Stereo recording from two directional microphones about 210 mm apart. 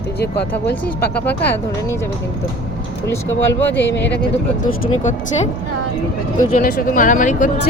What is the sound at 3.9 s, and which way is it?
Speech, 55° left (ahead or behind).